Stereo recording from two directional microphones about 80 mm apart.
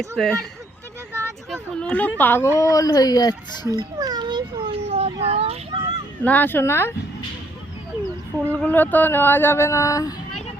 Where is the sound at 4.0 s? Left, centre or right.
Right.